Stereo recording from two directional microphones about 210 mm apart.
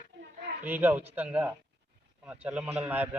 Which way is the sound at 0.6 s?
10° right (ahead or behind).